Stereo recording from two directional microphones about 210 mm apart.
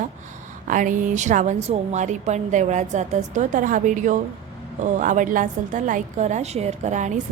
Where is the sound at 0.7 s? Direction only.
40° right (ahead or behind).